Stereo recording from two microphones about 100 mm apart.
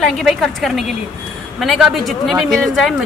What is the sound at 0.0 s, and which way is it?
Speech, centre (ahead or behind).